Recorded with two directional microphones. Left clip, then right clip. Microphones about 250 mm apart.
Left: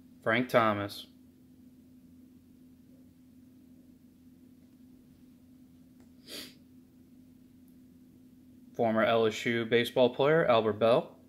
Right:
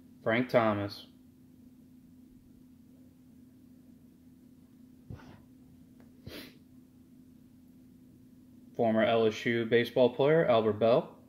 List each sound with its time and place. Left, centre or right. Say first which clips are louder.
0.2 s speech: left 1 dB; centre
8.7 s speech: even; centre